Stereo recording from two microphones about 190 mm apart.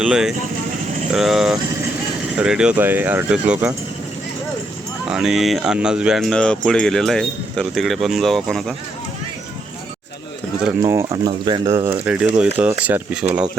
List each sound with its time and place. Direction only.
0.0 s speech: 5° right (ahead or behind)
5.0 s speech: centre (ahead or behind)
10.6 s speech: 10° right (ahead or behind)
11.3 s speech: 25° right (ahead or behind)
12.0 s speech: 5° right (ahead or behind)